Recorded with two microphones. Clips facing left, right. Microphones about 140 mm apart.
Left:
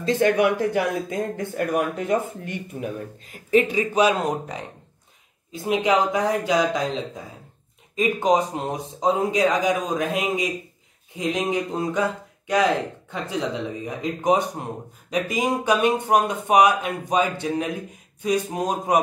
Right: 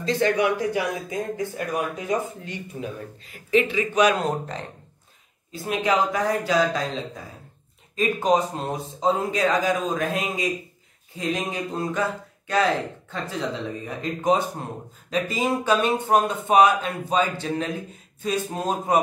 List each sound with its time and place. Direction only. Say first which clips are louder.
0.0 s speech: left 3 dB; 50° left (ahead or behind)
3.4 s a man's voice: left 2 dB; 40° left (ahead or behind)
4.3 s speech: left 1 dB; 10° left (ahead or behind)